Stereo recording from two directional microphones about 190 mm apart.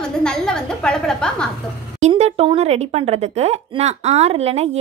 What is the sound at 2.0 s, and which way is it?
A woman's voice, 35° right (ahead or behind).